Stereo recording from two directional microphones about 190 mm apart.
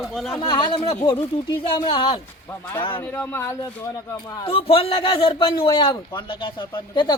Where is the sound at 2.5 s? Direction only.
10° left (ahead or behind).